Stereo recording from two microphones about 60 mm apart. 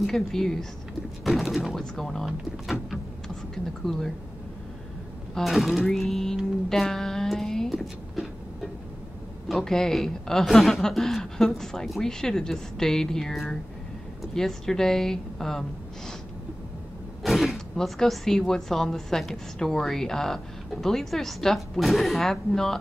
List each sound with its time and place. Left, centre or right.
0.0 s a woman's voice: centre
1.8 s a woman's voice: centre
3.5 s a woman's voice: centre
5.3 s a sound: centre
9.5 s a woman's voice: centre
17.2 s creak: centre
17.7 s a woman's voice: centre